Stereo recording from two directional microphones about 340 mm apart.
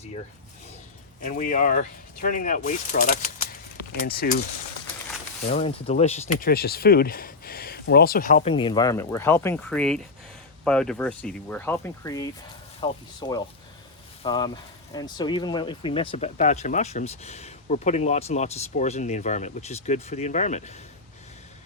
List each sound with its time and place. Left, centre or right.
1.2 s speech: left
5.5 s speech: centre